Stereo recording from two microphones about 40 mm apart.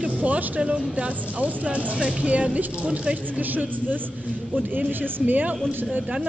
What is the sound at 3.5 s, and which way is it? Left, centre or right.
Speech, right.